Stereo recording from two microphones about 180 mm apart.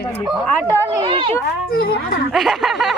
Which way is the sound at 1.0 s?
30° right (ahead or behind).